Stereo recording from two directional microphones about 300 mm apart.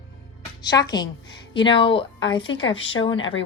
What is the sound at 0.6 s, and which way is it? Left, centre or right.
Speech, centre.